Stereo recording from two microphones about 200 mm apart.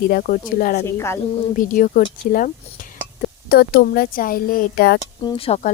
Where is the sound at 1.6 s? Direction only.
45° left (ahead or behind).